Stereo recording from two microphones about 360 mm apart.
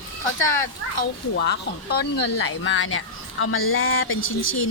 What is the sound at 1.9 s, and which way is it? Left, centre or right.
Speech, left.